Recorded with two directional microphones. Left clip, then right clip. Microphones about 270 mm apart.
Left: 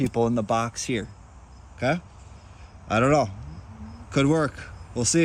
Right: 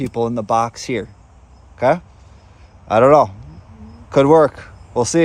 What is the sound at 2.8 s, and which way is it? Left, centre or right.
Speech, centre.